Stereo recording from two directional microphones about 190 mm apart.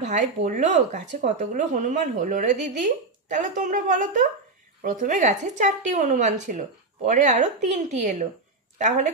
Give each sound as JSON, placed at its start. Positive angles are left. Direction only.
{"t": 0.0, "sound": "speech", "side_deg": -40}